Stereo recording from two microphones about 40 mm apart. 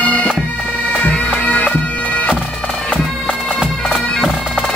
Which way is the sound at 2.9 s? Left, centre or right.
Left.